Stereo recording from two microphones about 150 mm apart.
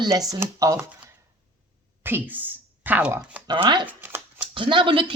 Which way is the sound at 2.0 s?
10° right (ahead or behind).